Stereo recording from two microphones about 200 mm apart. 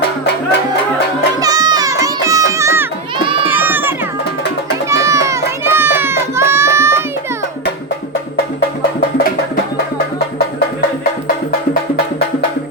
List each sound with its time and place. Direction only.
1.4 s music: 20° right (ahead or behind)